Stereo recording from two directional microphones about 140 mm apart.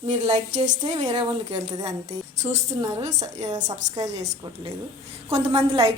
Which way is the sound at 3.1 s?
30° right (ahead or behind).